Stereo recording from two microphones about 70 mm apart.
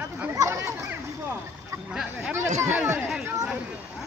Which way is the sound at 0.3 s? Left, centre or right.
Right.